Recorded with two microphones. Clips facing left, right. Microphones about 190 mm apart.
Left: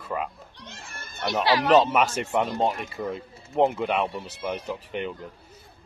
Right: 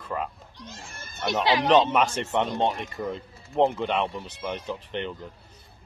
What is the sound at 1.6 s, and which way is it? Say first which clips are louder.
Speech: left 1 dB; 5° left (ahead or behind).